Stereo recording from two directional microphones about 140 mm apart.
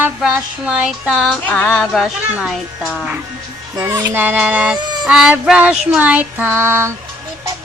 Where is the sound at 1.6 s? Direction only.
15° left (ahead or behind).